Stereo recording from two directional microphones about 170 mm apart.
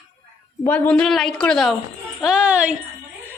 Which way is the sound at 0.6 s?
10° left (ahead or behind).